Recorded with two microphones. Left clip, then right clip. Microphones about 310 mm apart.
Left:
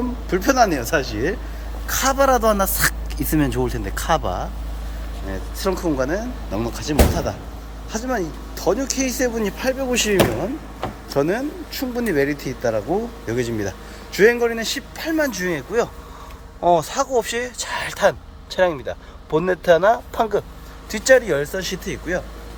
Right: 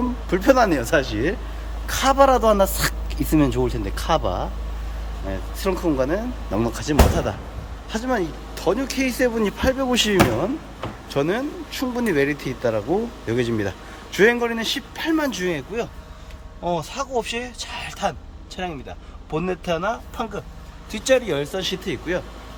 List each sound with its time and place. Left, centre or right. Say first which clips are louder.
0.3 s a man's voice: even; centre